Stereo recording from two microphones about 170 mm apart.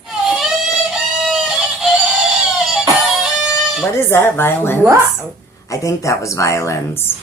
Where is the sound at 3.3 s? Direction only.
Centre (ahead or behind).